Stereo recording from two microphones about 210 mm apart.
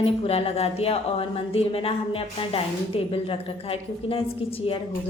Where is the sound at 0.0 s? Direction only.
25° left (ahead or behind).